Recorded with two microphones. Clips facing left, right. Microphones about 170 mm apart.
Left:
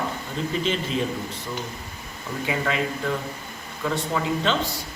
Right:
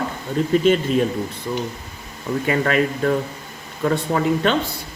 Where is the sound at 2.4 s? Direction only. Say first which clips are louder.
Right 6 dB; 60° right (ahead or behind).